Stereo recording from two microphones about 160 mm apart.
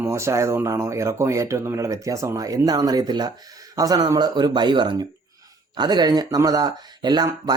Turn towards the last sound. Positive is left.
turn(degrees=-25)  # may be behind; listen again after turning